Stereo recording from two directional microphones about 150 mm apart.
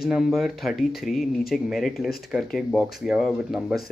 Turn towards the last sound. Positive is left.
turn(degrees=0)  # may be behind; listen again after turning